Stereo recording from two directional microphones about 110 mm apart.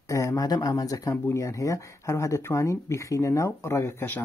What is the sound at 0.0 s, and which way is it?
Speech, 30° left (ahead or behind).